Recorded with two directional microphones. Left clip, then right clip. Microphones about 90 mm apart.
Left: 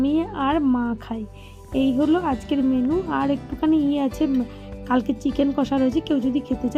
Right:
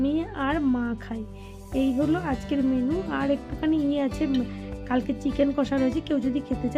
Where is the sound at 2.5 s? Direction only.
35° left (ahead or behind).